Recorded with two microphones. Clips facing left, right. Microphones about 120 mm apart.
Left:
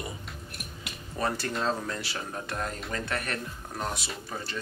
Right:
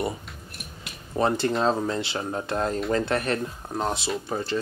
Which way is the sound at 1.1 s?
25° right (ahead or behind).